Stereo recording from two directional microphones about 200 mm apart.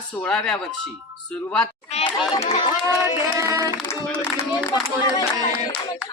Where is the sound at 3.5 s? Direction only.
15° right (ahead or behind).